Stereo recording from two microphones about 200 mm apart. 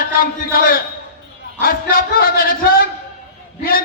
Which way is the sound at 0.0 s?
50° left (ahead or behind).